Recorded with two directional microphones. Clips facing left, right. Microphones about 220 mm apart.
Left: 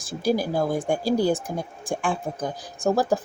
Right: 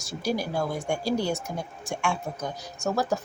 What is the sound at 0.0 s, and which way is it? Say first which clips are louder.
Speech: left 5 dB; 50° left (ahead or behind).